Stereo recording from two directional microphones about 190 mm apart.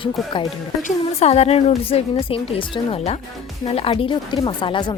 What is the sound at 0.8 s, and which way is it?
A woman's voice, 35° left (ahead or behind).